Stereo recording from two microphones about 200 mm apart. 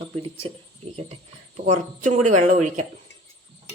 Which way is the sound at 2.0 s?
35° right (ahead or behind).